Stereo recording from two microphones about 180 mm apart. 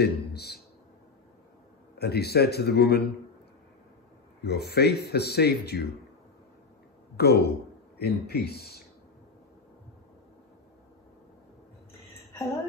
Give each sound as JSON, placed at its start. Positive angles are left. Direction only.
{"t": 0.0, "sound": "speech", "side_deg": 65}
{"t": 2.0, "sound": "speech", "side_deg": 65}
{"t": 4.4, "sound": "speech", "side_deg": 65}
{"t": 7.2, "sound": "speech", "side_deg": 65}